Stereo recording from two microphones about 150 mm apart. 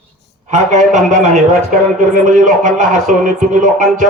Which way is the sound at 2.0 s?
60° right (ahead or behind).